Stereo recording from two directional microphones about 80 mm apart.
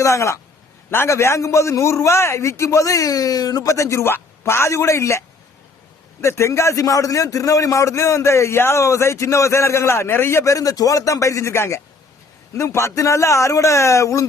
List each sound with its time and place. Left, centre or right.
0.0 s a man's voice: left
6.2 s a man's voice: left